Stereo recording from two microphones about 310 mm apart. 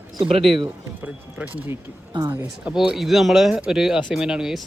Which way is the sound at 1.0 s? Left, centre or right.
Centre.